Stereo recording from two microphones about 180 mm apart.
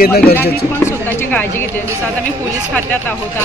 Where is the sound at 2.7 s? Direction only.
10° left (ahead or behind).